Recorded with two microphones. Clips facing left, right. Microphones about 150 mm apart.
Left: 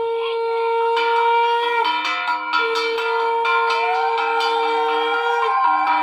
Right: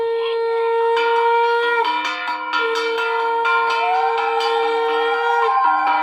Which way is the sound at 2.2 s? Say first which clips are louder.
Left 2 dB; centre (ahead or behind).